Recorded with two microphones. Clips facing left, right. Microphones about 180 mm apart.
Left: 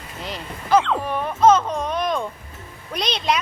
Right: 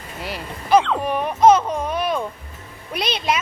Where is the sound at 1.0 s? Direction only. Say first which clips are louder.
Right 2 dB; 15° right (ahead or behind).